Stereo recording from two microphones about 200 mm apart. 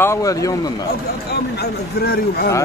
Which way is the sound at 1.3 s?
50° left (ahead or behind).